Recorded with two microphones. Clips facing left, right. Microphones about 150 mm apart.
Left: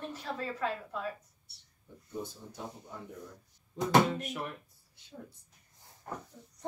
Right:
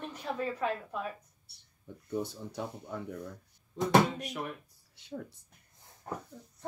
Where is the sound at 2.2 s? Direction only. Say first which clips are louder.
Right 5 dB; 75° right (ahead or behind).